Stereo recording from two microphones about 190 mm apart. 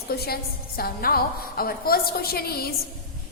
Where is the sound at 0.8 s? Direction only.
50° left (ahead or behind).